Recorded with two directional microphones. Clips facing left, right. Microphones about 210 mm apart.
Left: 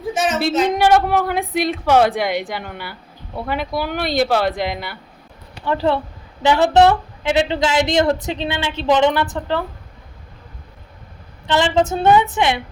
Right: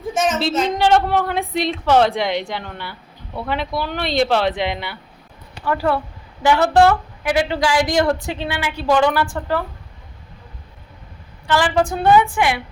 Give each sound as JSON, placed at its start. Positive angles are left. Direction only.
{"t": 0.1, "sound": "a sound", "side_deg": 0}
{"t": 0.5, "sound": "a woman's voice", "side_deg": 10}
{"t": 5.6, "sound": "a woman's voice", "side_deg": 25}
{"t": 11.4, "sound": "a woman's voice", "side_deg": 25}